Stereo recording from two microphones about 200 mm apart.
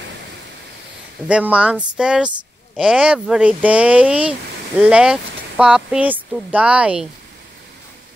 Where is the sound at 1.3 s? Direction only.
5° right (ahead or behind).